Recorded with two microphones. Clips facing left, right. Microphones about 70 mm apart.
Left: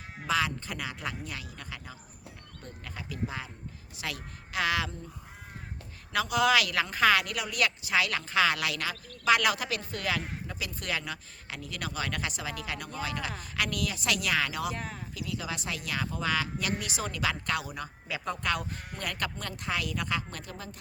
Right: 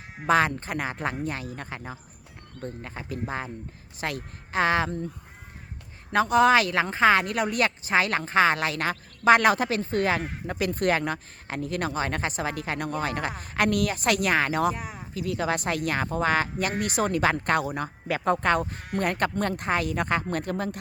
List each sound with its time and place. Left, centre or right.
0.3 s speech: right
6.1 s speech: right
14.8 s speech: centre
15.1 s speech: right